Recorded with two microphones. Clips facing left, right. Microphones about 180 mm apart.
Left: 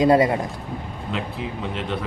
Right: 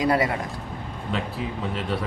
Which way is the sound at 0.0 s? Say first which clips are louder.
Left 6 dB; 25° left (ahead or behind).